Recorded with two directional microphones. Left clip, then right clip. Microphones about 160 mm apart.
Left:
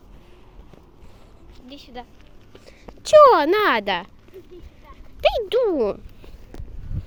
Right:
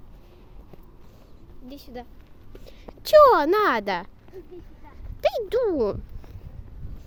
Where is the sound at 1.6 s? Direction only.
65° right (ahead or behind).